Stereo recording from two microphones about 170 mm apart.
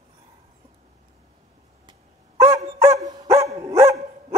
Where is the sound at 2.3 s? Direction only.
15° right (ahead or behind).